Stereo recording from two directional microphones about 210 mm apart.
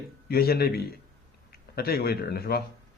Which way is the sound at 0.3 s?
45° left (ahead or behind).